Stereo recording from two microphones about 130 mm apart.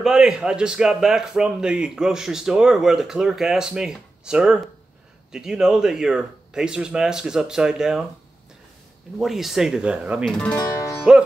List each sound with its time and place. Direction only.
0.0 s speech: 5° right (ahead or behind)
9.2 s speech: centre (ahead or behind)
10.5 s music: 25° left (ahead or behind)